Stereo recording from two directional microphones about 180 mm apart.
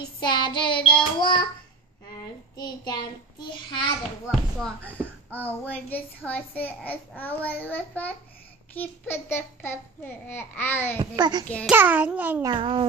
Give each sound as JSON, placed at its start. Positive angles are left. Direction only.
{"t": 0.2, "sound": "child singing", "side_deg": 25}
{"t": 2.5, "sound": "child singing", "side_deg": 25}
{"t": 4.3, "sound": "a child's voice", "side_deg": 0}
{"t": 11.0, "sound": "child singing", "side_deg": -25}
{"t": 11.4, "sound": "a child's voice", "side_deg": 5}
{"t": 11.7, "sound": "a child's voice", "side_deg": -10}
{"t": 12.4, "sound": "child singing", "side_deg": -30}